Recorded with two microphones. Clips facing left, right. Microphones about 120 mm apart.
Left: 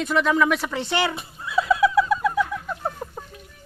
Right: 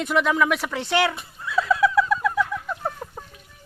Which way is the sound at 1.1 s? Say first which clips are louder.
Left 1 dB; 15° left (ahead or behind).